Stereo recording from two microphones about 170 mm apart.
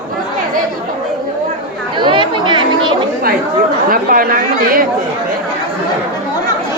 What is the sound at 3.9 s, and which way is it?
Speech, 55° right (ahead or behind).